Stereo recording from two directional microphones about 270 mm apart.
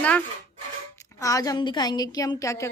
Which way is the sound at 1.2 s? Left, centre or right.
Centre.